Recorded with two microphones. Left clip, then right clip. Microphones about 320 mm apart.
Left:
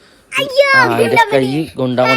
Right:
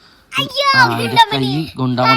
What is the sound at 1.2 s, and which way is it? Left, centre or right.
Speech, centre.